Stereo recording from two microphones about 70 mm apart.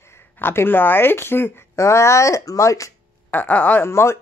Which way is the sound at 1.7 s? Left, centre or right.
Left.